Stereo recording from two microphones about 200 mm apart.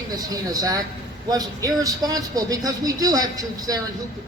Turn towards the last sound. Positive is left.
turn(degrees=-20)  # may be behind; listen again after turning